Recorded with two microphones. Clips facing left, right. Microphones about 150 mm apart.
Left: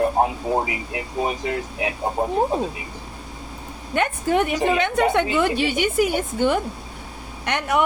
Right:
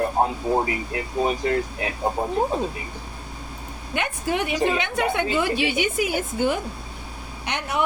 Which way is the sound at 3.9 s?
50° left (ahead or behind).